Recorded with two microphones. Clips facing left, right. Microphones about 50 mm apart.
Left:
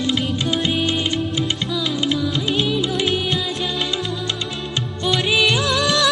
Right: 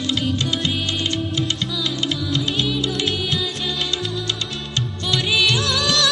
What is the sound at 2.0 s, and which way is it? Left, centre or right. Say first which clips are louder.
Music: left 2 dB; centre.